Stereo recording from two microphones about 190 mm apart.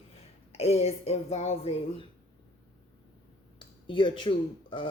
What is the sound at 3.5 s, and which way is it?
Speech, 25° left (ahead or behind).